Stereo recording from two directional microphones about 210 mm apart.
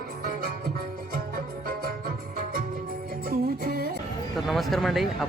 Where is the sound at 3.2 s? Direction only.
45° right (ahead or behind).